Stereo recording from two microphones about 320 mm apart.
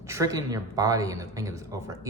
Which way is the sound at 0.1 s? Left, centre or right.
Centre.